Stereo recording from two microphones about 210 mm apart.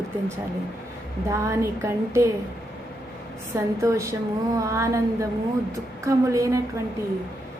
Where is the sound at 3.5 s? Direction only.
15° right (ahead or behind).